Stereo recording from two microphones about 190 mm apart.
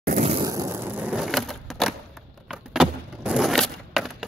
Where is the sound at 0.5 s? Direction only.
15° right (ahead or behind).